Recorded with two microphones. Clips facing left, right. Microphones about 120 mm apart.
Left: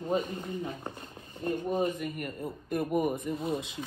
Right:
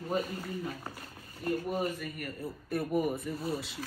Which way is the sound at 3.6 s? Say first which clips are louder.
Left 2 dB; 20° left (ahead or behind).